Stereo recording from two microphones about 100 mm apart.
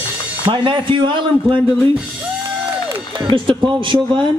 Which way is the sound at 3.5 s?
55° right (ahead or behind).